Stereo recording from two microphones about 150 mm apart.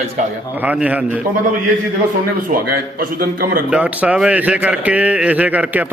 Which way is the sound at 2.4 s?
70° right (ahead or behind).